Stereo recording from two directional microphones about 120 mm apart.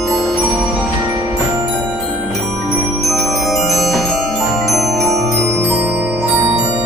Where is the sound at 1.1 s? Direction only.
30° right (ahead or behind).